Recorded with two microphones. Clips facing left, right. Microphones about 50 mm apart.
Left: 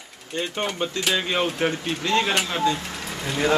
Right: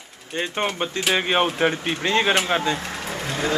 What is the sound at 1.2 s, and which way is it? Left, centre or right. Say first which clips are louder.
Speech: right 3 dB; right.